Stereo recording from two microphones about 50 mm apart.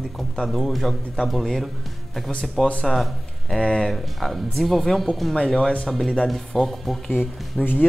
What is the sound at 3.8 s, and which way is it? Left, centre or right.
Speech, centre.